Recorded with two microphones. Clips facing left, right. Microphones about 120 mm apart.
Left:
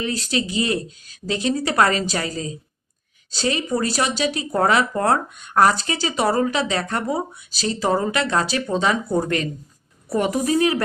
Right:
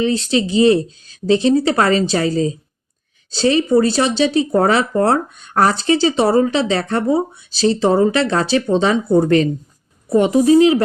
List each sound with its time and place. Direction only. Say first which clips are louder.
0.0 s speech: right 7 dB; 25° right (ahead or behind)